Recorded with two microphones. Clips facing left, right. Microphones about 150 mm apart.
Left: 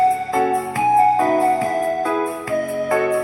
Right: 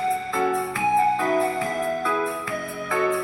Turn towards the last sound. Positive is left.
turn(degrees=45)  # may be behind; listen again after turning